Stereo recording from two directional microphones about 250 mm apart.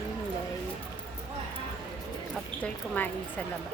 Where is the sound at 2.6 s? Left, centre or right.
Centre.